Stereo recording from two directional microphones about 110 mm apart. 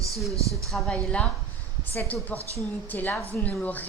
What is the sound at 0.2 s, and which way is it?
A woman's voice, centre (ahead or behind).